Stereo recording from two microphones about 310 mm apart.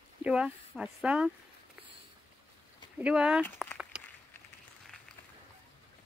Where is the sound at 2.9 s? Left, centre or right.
Centre.